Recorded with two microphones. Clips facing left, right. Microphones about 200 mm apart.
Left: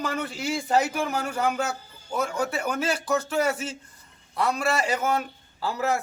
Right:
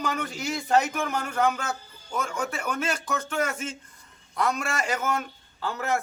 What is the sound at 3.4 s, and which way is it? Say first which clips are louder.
Music: left 3 dB; 35° left (ahead or behind).